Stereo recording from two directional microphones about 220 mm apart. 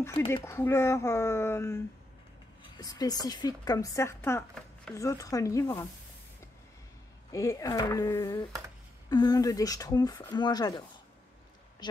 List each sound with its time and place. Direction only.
0.0 s speech: 10° left (ahead or behind)
2.8 s speech: 15° left (ahead or behind)
7.3 s speech: 15° left (ahead or behind)